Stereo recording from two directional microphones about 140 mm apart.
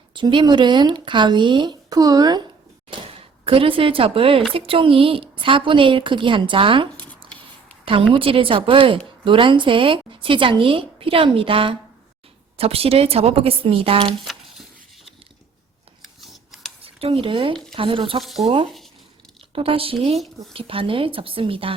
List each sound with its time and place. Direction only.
0.1 s a woman's voice: 35° right (ahead or behind)
3.2 s a woman's voice: 40° right (ahead or behind)
8.1 s a woman's voice: 40° right (ahead or behind)
14.3 s a sound: centre (ahead or behind)
16.2 s scissors: centre (ahead or behind)
16.8 s a woman's voice: 40° right (ahead or behind)
18.2 s speech: centre (ahead or behind)
19.5 s a woman's voice: 40° right (ahead or behind)